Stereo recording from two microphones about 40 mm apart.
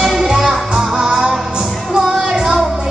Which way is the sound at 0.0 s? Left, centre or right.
Centre.